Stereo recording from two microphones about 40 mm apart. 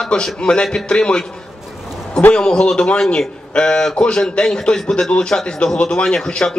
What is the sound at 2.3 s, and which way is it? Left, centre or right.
A man's voice, left.